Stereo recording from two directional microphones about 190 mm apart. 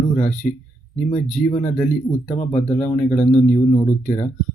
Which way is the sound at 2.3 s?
35° left (ahead or behind).